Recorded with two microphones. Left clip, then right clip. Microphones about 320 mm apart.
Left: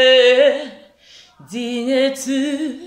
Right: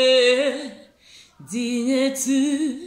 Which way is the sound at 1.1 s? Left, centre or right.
Centre.